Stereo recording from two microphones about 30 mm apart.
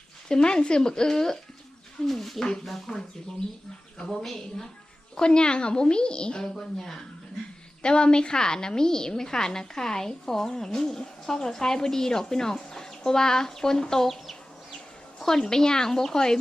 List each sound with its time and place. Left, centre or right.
0.3 s a woman's voice: left
2.0 s speech: centre
4.1 s speech: centre
5.1 s a woman's voice: left
6.5 s speech: centre
7.8 s a woman's voice: left
15.2 s a woman's voice: centre